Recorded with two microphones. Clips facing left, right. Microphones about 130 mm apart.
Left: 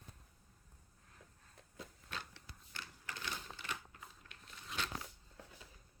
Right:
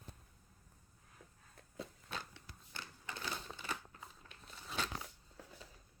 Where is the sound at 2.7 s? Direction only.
30° right (ahead or behind).